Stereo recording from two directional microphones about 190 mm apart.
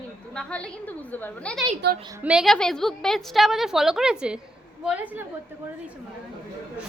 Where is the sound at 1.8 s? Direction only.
60° right (ahead or behind).